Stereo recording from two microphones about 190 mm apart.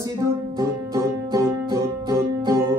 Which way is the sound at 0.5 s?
15° right (ahead or behind).